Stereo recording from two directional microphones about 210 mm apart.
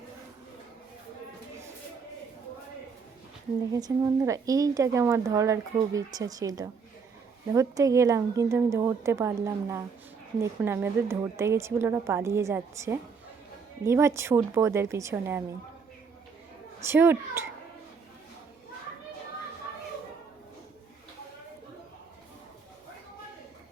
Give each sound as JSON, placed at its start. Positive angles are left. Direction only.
{"t": 3.8, "sound": "speech", "side_deg": -15}
{"t": 16.8, "sound": "speech", "side_deg": -10}